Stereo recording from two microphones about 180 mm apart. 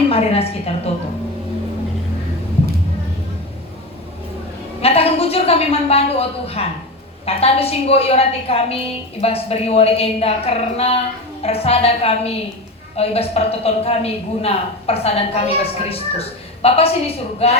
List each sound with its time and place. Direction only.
0.1 s a woman's voice: 35° left (ahead or behind)
4.8 s a woman's voice: 35° left (ahead or behind)